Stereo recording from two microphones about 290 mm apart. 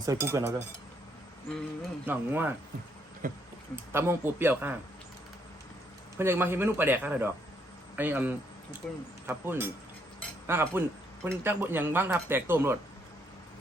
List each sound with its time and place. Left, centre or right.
0.0 s speech: centre
2.0 s speech: centre
3.2 s speech: right
3.9 s speech: centre
6.1 s speech: centre
8.8 s speech: centre
9.2 s speech: centre